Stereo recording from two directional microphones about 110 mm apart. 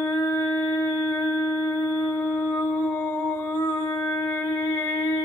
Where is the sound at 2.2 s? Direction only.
10° left (ahead or behind).